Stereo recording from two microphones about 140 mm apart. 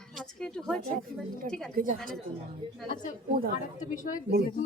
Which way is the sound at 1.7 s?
70° right (ahead or behind).